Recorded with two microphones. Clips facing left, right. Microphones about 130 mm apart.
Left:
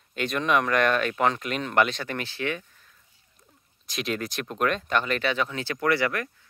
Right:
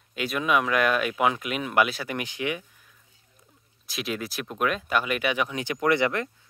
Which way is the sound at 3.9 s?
5° right (ahead or behind).